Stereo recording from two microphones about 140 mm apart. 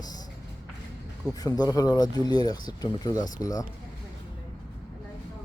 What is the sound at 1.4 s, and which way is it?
Speech, 25° left (ahead or behind).